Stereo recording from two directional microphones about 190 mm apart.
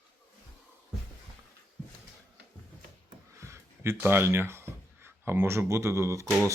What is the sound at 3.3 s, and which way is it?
Speech, 15° right (ahead or behind).